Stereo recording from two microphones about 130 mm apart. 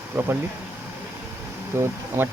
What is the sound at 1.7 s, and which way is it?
Speech, 20° right (ahead or behind).